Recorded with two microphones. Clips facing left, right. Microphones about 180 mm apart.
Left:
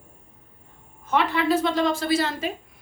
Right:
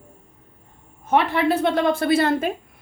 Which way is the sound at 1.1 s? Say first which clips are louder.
Right 3 dB; 60° right (ahead or behind).